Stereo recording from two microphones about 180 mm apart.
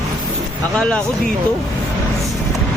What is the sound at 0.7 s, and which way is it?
Speech, 5° left (ahead or behind).